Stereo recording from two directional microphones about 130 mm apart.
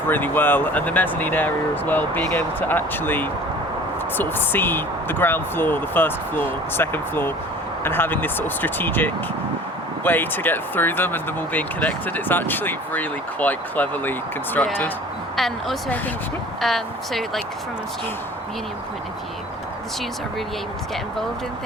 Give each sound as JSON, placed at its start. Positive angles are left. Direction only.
{"t": 0.1, "sound": "speech", "side_deg": 15}
{"t": 15.4, "sound": "speech", "side_deg": 0}